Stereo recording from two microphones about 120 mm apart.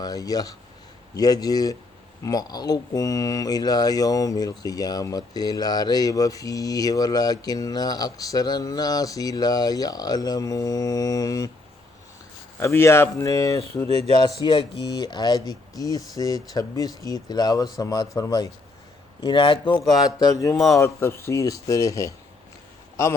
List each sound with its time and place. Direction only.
0.0 s speech: 30° left (ahead or behind)
12.5 s speech: 20° left (ahead or behind)
14.2 s speech: 40° left (ahead or behind)
19.2 s speech: 45° left (ahead or behind)
19.8 s speech: centre (ahead or behind)
20.1 s speech: 30° left (ahead or behind)